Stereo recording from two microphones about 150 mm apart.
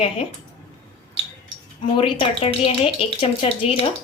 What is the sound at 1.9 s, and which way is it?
A woman's voice, 40° left (ahead or behind).